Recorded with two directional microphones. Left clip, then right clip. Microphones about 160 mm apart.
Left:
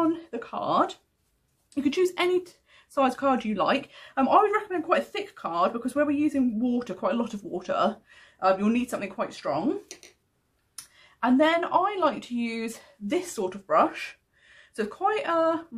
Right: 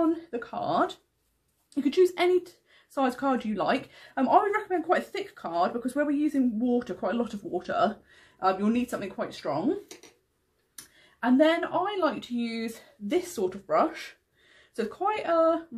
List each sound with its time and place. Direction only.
0.1 s speech: 25° left (ahead or behind)
11.3 s speech: 35° left (ahead or behind)